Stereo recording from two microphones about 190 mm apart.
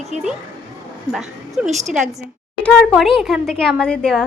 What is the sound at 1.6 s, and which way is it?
A woman's voice, 5° right (ahead or behind).